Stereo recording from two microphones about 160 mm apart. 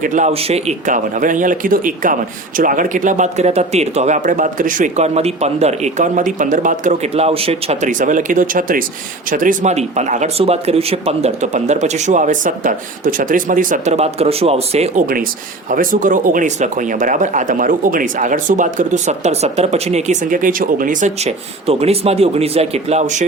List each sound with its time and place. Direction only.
0.0 s speech: 50° right (ahead or behind)
7.1 s speech: 40° right (ahead or behind); by 13.9 s 55° right (ahead or behind)
13.9 s speech: 40° right (ahead or behind)
15.0 s speech: 65° right (ahead or behind); by 23.2 s 45° right (ahead or behind)